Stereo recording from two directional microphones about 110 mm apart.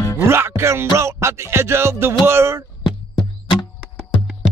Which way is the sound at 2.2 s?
25° right (ahead or behind).